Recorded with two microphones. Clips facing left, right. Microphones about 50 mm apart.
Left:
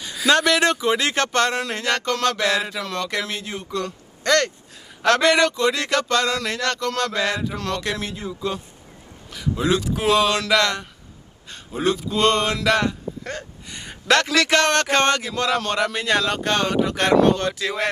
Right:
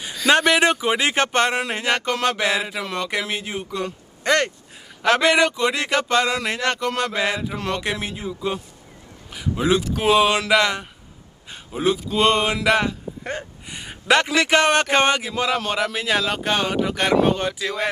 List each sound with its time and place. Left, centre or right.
0.3 s speech: centre
9.3 s speech: centre